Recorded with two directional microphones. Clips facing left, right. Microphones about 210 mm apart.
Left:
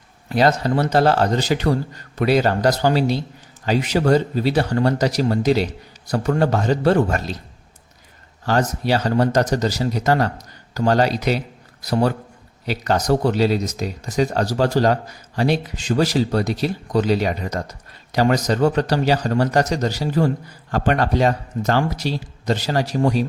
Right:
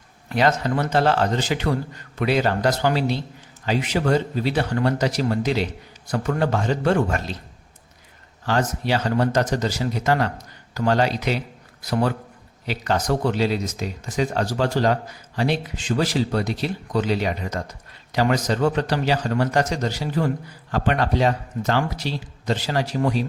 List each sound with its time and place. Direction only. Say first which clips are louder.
0.3 s speech: left 3 dB; 35° left (ahead or behind)
8.4 s speech: left 3 dB; 40° left (ahead or behind)